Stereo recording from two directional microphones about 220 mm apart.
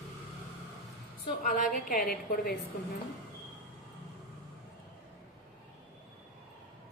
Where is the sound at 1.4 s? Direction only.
35° left (ahead or behind).